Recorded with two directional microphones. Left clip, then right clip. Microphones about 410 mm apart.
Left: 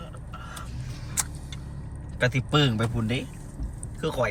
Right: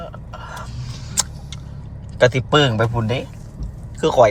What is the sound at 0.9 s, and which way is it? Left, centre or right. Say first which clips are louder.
Vehicle: right 8 dB; centre.